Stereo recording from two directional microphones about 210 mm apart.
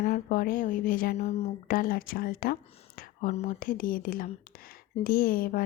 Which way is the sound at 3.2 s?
35° left (ahead or behind).